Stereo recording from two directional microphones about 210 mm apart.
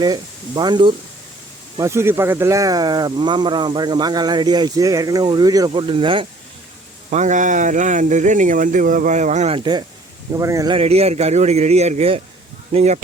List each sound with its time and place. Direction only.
0.0 s speech: 20° right (ahead or behind)
7.1 s speech: 35° right (ahead or behind)
10.3 s speech: 15° right (ahead or behind)
10.8 s speech: 30° right (ahead or behind)